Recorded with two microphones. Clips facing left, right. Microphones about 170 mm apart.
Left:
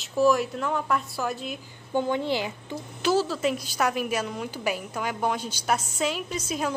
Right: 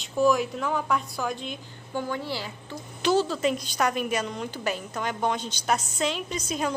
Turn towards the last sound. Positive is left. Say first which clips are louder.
# even
turn(degrees=5)  # may be behind; listen again after turning